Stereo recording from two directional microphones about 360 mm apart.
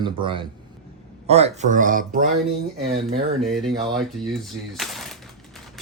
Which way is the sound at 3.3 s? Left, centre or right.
Centre.